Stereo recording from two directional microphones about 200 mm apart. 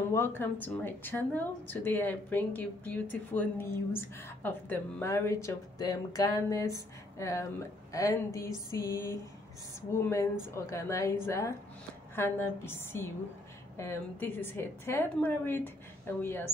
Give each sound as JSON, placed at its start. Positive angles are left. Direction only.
{"t": 0.4, "sound": "a woman's voice", "side_deg": 10}